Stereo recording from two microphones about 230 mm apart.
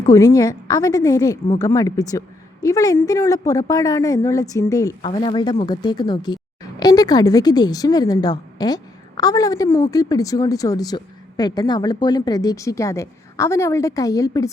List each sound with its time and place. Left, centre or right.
0.0 s speech: centre